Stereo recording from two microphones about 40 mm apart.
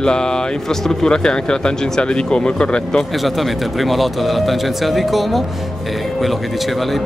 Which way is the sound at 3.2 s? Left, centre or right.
Centre.